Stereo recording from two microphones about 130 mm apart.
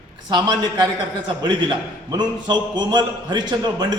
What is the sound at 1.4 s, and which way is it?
A man's voice, 35° right (ahead or behind).